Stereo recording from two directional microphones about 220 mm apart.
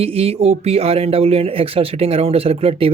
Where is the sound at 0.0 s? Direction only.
25° right (ahead or behind).